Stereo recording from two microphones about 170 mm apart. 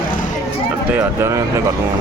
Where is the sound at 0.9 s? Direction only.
15° right (ahead or behind).